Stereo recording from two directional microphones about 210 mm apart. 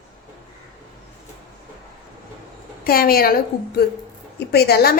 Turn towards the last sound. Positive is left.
turn(degrees=50)  # may be behind; listen again after turning